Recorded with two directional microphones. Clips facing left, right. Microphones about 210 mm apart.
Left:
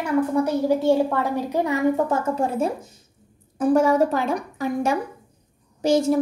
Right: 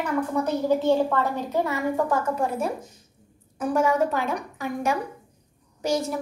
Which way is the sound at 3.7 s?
35° left (ahead or behind).